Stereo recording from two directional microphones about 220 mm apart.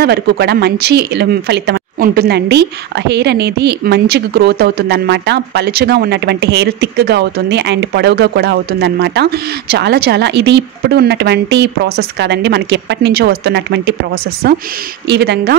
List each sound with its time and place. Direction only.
0.0 s speech: 50° right (ahead or behind)